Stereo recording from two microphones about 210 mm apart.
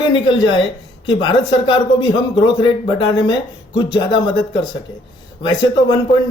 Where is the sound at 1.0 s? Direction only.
20° left (ahead or behind).